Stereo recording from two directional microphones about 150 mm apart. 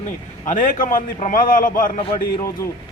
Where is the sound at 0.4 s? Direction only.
60° left (ahead or behind).